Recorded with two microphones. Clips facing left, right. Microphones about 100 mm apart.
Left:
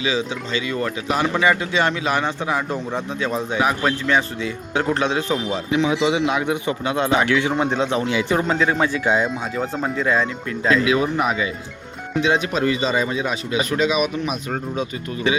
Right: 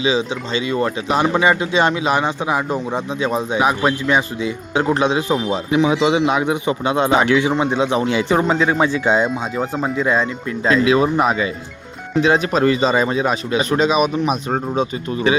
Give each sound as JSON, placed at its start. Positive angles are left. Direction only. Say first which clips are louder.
{"t": 0.0, "sound": "speech", "louder": "right 4 dB", "side_deg": -20}
{"t": 7.5, "sound": "speech", "louder": "right 3 dB", "side_deg": -5}
{"t": 8.0, "sound": "speech", "louder": "right 3 dB", "side_deg": -30}
{"t": 9.6, "sound": "speech", "louder": "right 2 dB", "side_deg": -10}
{"t": 10.1, "sound": "a man's voice", "louder": "right 2 dB", "side_deg": -20}